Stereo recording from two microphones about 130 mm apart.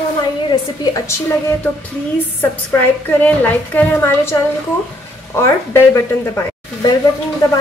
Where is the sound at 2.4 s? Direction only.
15° left (ahead or behind).